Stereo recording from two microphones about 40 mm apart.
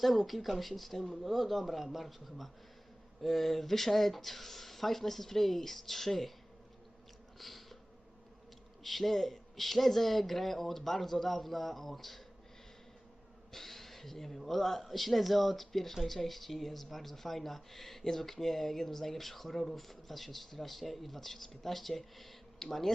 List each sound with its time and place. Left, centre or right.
0.0 s speech: centre
7.3 s insect: centre
8.8 s speech: centre
13.5 s speech: centre